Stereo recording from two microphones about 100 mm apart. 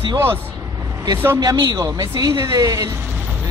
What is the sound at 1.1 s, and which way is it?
Speech, 25° right (ahead or behind).